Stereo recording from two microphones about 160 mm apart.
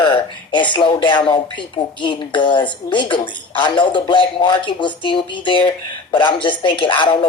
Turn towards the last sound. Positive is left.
turn(degrees=30)  # may be behind; listen again after turning